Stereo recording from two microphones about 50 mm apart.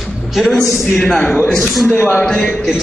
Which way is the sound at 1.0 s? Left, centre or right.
Centre.